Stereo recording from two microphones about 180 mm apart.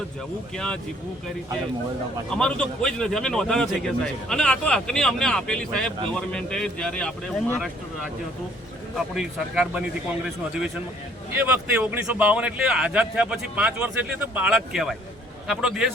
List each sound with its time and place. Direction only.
0.5 s speech: 5° left (ahead or behind)
2.3 s speech: 5° left (ahead or behind)
9.1 s speech: centre (ahead or behind)